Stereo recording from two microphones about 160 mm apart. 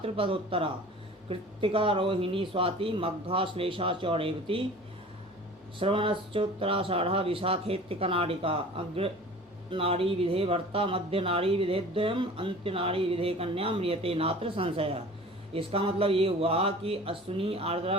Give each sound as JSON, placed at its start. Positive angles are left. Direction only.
{"t": 0.0, "sound": "speech", "side_deg": -35}
{"t": 5.8, "sound": "speech", "side_deg": -35}